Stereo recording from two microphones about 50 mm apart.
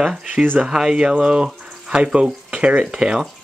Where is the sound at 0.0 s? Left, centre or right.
Centre.